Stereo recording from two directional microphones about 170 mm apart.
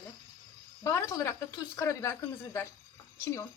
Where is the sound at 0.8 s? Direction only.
15° left (ahead or behind).